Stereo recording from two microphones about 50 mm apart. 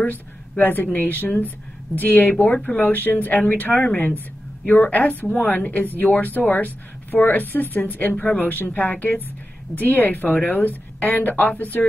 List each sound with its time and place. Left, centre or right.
0.0 s a woman's voice: left
2.4 s speech: left
2.8 s speech: left